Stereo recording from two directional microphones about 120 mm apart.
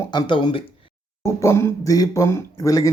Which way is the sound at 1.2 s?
20° left (ahead or behind).